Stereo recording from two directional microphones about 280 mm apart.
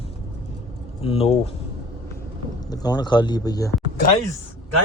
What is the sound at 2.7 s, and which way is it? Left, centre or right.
Speech, centre.